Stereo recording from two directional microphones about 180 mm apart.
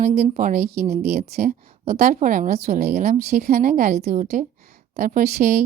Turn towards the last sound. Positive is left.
turn(degrees=-45)  # may be behind; listen again after turning